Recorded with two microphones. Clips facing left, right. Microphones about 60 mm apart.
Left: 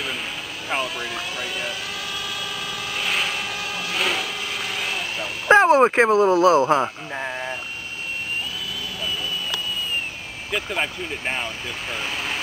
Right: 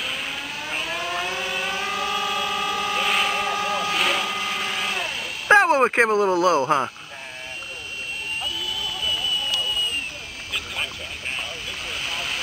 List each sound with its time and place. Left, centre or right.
1.1 s vehicle: right
3.0 s vehicle: centre
3.3 s vehicle: right
3.9 s vehicle: centre
4.2 s a sound: right
5.5 s a sound: centre
6.3 s speech: left
7.2 s a sound: left
10.8 s speech: left
11.9 s speech: centre